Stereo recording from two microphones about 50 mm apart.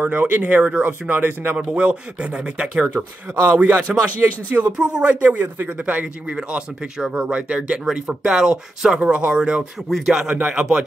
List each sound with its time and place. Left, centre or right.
0.0 s speech: right
2.8 s speech: right
5.2 s speech: right
7.0 s speech: centre
9.8 s speech: centre
10.2 s speech: right